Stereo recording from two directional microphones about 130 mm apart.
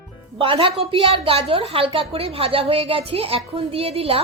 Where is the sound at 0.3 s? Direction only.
40° right (ahead or behind).